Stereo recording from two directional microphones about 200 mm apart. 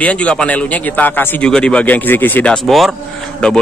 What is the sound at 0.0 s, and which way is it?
Speech, 5° left (ahead or behind).